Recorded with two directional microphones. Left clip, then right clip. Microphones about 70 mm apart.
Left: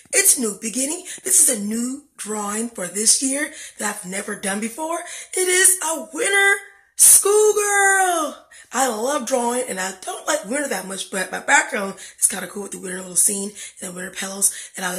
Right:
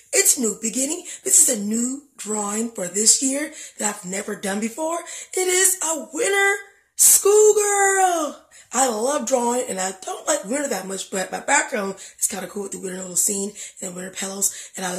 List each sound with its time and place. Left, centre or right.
0.1 s speech: right